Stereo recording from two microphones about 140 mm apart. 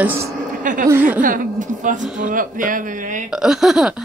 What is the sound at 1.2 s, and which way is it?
Speech, 75° right (ahead or behind).